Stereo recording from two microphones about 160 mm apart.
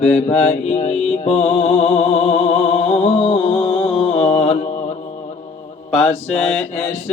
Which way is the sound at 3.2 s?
30° left (ahead or behind).